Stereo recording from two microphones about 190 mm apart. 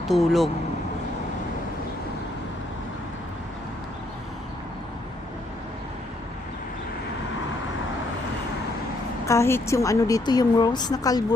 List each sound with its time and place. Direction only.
0.1 s speech: centre (ahead or behind)
9.2 s speech: 15° left (ahead or behind)